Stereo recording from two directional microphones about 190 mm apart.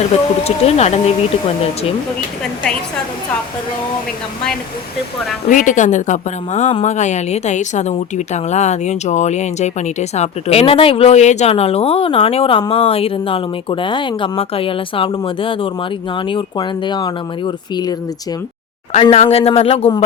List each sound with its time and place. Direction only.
0.4 s speech: 35° left (ahead or behind)
5.5 s speech: 40° left (ahead or behind); by 17.9 s 20° left (ahead or behind)
18.9 s speech: 30° left (ahead or behind)